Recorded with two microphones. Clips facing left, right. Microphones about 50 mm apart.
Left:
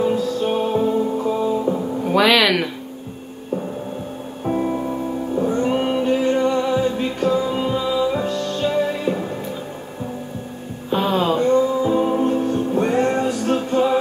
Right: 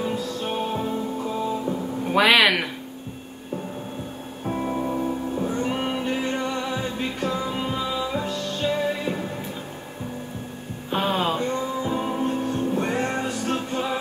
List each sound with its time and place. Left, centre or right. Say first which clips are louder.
0.0 s music: left 8 dB; centre
2.1 s speech: left 2 dB; centre
4.5 s music: left 4 dB; centre
10.9 s music: left 5 dB; centre